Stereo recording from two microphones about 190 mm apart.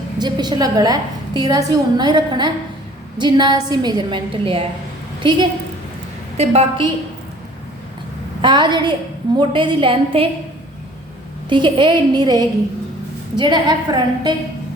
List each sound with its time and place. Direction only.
0.2 s a woman's voice: 20° right (ahead or behind)
6.3 s a woman's voice: 35° right (ahead or behind)
8.4 s a woman's voice: 25° right (ahead or behind)
11.4 s a woman's voice: 25° right (ahead or behind)